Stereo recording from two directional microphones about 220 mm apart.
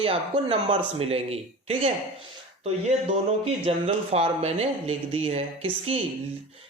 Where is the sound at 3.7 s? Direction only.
25° right (ahead or behind).